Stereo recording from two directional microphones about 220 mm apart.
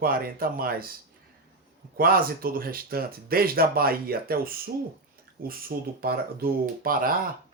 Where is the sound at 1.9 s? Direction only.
40° right (ahead or behind).